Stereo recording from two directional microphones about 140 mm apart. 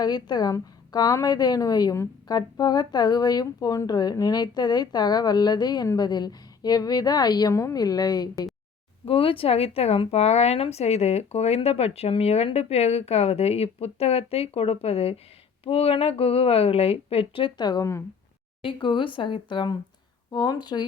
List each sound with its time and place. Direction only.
0.0 s a woman's voice: 30° left (ahead or behind)
9.0 s a woman's voice: 40° left (ahead or behind)
18.6 s speech: 35° left (ahead or behind)